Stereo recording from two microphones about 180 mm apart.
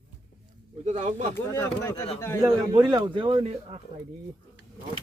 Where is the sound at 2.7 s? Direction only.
25° right (ahead or behind).